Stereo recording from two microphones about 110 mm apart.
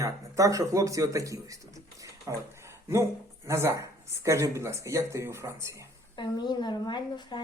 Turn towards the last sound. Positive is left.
turn(degrees=45)  # may be behind; listen again after turning